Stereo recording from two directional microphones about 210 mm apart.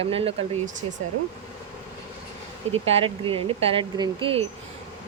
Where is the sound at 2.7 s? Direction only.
30° right (ahead or behind).